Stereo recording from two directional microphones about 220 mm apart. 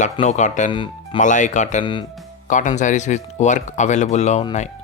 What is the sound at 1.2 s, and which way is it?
Speech, 35° left (ahead or behind).